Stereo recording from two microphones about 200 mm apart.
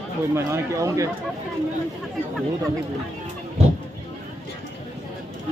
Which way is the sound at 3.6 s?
30° right (ahead or behind).